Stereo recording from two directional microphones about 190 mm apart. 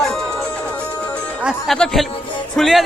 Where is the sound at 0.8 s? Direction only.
5° left (ahead or behind).